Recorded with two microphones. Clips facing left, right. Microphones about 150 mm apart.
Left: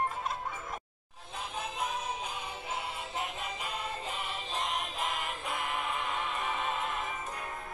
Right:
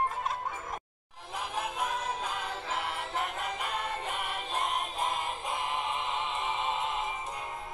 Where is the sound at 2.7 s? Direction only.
70° right (ahead or behind).